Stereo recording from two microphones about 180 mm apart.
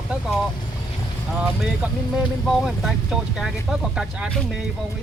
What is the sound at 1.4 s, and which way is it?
Speech, 5° right (ahead or behind).